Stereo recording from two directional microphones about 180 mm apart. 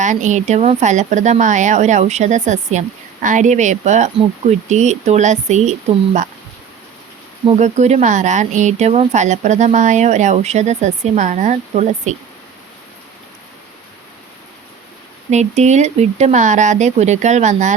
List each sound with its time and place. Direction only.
0.0 s speech: 45° right (ahead or behind)
7.4 s speech: 40° right (ahead or behind)
15.3 s speech: 40° right (ahead or behind)